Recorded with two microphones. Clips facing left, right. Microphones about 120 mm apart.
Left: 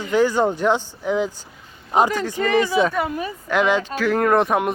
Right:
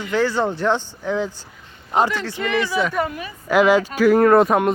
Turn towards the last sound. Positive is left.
turn(degrees=0)  # may be behind; listen again after turning